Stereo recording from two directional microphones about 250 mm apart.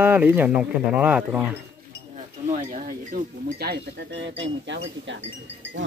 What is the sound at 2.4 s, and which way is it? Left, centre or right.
Speech, right.